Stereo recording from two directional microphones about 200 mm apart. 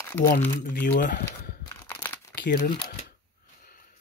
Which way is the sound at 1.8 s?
10° left (ahead or behind).